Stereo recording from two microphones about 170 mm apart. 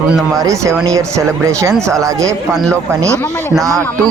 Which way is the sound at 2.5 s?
5° left (ahead or behind).